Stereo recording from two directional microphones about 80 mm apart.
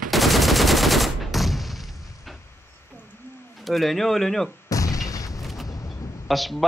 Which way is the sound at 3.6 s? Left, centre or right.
Centre.